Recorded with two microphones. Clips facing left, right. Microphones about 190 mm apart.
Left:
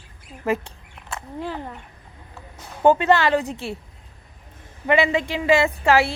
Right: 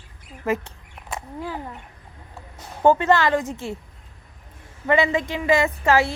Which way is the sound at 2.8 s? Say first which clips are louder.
Left 1 dB; 20° left (ahead or behind).